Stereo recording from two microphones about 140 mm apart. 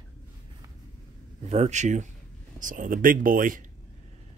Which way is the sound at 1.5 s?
55° right (ahead or behind).